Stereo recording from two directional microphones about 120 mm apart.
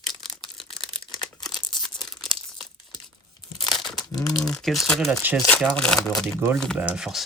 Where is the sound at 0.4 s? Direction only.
45° left (ahead or behind).